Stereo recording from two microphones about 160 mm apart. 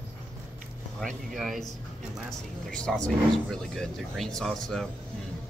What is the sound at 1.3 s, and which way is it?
Speech, centre (ahead or behind).